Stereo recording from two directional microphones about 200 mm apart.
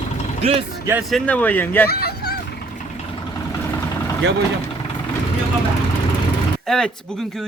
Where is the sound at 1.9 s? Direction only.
50° left (ahead or behind).